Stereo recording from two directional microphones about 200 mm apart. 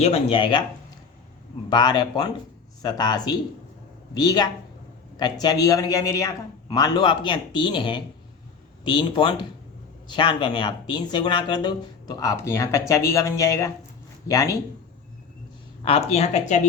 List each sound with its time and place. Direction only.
0.0 s a man's voice: 30° left (ahead or behind)
1.7 s a man's voice: 20° left (ahead or behind)
15.8 s speech: 30° left (ahead or behind)